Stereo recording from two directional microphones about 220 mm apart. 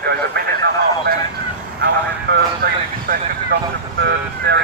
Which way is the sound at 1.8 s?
45° right (ahead or behind).